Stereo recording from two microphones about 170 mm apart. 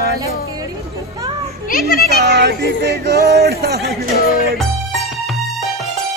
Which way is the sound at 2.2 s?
80° right.